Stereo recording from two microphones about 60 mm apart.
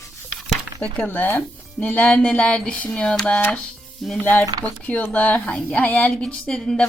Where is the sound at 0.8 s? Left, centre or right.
Left.